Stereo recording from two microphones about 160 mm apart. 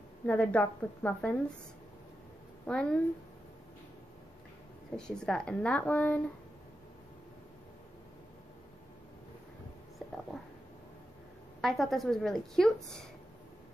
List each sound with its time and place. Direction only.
0.3 s speech: 10° left (ahead or behind)
2.6 s speech: 5° left (ahead or behind)
4.9 s speech: 5° left (ahead or behind)
11.6 s a woman's voice: centre (ahead or behind)